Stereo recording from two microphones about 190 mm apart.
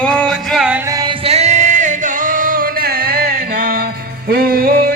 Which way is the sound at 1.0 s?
30° right (ahead or behind).